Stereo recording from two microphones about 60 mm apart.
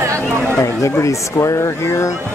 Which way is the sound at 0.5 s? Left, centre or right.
Left.